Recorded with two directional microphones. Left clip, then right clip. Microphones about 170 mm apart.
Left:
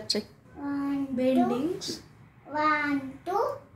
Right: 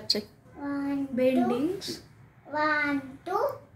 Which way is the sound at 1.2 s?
30° right (ahead or behind).